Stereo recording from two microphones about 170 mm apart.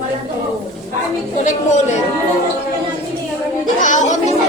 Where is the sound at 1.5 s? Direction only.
45° left (ahead or behind).